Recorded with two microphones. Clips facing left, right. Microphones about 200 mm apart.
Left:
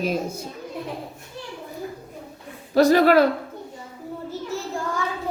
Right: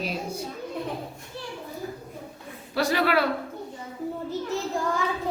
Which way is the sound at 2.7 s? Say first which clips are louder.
Left 8 dB; 45° left (ahead or behind).